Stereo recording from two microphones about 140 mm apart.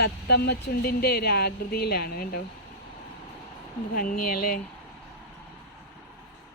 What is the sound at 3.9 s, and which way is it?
Speech, 85° left.